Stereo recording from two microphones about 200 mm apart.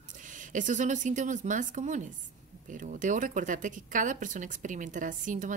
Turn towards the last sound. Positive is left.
turn(degrees=-40)  # may be behind; listen again after turning